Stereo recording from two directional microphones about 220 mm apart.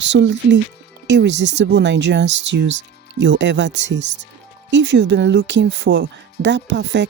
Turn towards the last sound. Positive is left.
turn(degrees=-55)  # may be behind; listen again after turning